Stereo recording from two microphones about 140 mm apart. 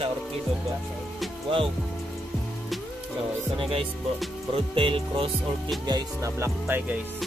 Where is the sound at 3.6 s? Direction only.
40° right (ahead or behind).